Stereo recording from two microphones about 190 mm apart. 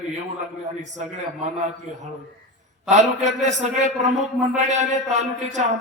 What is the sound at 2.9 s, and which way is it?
Speech, 40° right (ahead or behind).